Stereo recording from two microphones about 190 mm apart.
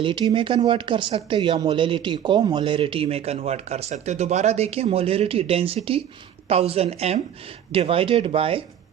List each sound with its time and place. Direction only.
0.0 s speech: 25° right (ahead or behind)